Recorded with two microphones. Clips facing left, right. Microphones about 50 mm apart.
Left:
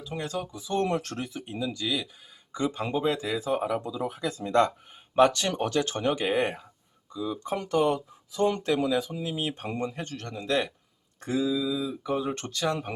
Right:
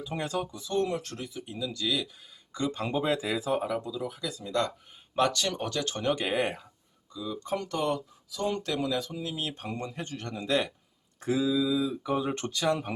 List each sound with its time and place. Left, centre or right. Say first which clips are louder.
0.0 s speech: right 1 dB; centre
0.9 s speech: left 4 dB; left
1.5 s speech: even; left; by 2.9 s centre
2.9 s speech: right 1 dB; centre
3.6 s speech: left 2 dB; centre
3.8 s speech: left 4 dB; left
5.3 s speech: left 4 dB; left
6.0 s speech: even; centre
7.1 s speech: left 2 dB; centre
8.3 s speech: left 5 dB; left; by 10.0 s centre
10.0 s speech: even; centre